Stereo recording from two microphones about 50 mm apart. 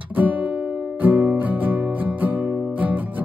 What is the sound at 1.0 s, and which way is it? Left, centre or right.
Music, right.